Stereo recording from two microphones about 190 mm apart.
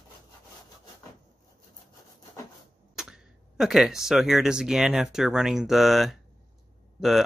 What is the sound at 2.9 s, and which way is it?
Speech, 5° right (ahead or behind).